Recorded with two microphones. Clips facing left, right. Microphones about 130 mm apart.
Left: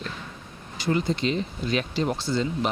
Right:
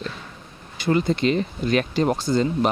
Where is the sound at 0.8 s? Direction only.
60° right (ahead or behind).